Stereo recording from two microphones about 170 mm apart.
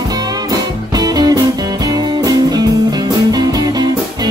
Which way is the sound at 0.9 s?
25° right (ahead or behind).